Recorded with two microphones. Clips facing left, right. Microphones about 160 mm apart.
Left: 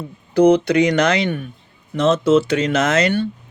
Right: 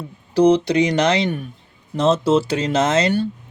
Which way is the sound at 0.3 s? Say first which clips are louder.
Left 1 dB; 55° left (ahead or behind).